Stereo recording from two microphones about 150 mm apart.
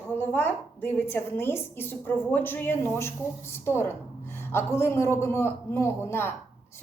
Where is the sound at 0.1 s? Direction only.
15° left (ahead or behind).